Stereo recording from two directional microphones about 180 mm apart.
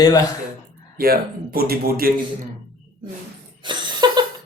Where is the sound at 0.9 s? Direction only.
55° right (ahead or behind).